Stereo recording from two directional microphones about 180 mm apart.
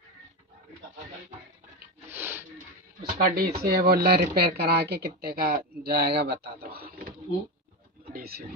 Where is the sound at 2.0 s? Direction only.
15° right (ahead or behind).